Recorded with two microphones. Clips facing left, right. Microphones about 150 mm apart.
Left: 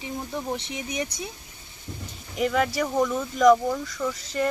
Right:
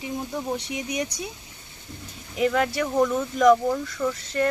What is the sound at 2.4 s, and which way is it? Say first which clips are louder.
Speech: right 1 dB; centre (ahead or behind).